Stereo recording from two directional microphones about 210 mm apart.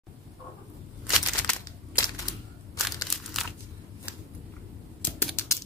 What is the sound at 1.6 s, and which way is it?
Crushing, 20° left (ahead or behind).